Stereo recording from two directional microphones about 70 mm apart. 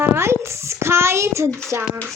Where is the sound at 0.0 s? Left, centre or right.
Right.